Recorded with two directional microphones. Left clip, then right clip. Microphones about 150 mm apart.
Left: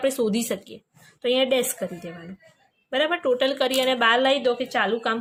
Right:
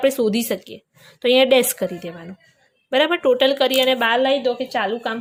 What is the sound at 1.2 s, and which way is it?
A woman's voice, 35° right (ahead or behind).